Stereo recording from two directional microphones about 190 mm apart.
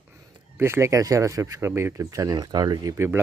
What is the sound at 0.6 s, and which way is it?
Speech, 15° right (ahead or behind).